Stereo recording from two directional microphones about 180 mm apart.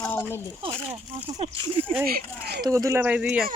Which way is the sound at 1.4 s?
35° right (ahead or behind).